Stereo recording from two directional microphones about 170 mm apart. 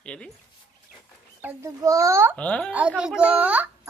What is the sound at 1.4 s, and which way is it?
Speech, 15° right (ahead or behind).